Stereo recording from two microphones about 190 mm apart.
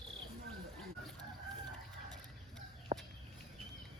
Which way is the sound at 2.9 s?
40° right (ahead or behind).